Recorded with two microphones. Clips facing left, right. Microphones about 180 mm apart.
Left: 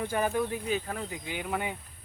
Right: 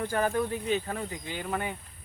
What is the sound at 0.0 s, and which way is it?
Speech, 10° left (ahead or behind).